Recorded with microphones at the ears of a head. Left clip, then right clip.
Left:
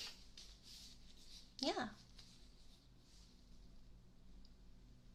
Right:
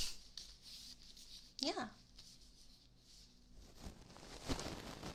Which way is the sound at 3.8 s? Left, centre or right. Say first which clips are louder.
Right 16 dB; right.